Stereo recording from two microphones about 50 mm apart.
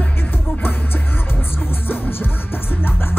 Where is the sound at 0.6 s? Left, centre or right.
Left.